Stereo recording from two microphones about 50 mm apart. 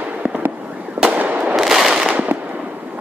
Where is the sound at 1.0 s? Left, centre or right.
Right.